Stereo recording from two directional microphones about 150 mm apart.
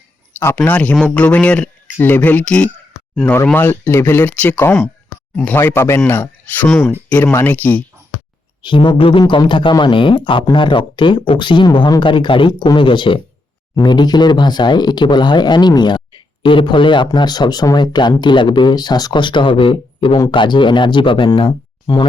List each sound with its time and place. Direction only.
0.3 s speech: 15° left (ahead or behind)
8.6 s speech: 35° left (ahead or behind)